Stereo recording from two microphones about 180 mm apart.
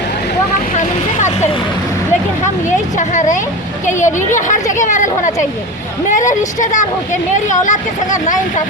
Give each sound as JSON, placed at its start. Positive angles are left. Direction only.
{"t": 0.8, "sound": "vehicle", "side_deg": 40}
{"t": 2.6, "sound": "a woman's voice", "side_deg": 40}